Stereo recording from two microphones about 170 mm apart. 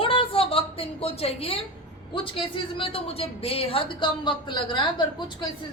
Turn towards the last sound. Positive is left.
turn(degrees=30)  # may be behind; listen again after turning